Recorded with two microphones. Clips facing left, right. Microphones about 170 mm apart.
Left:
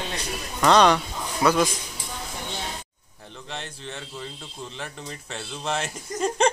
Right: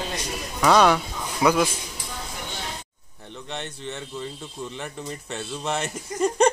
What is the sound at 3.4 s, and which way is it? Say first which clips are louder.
Speech: right 3 dB; centre (ahead or behind).